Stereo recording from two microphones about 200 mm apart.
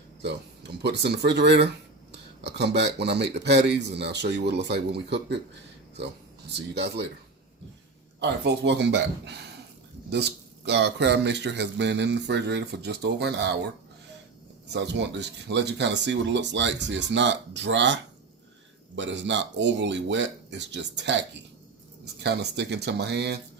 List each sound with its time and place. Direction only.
0.2 s speech: 55° right (ahead or behind)
6.5 s speech: 60° right (ahead or behind)
8.2 s speech: 60° right (ahead or behind)
10.7 s speech: 60° right (ahead or behind)
14.7 s speech: 60° right (ahead or behind)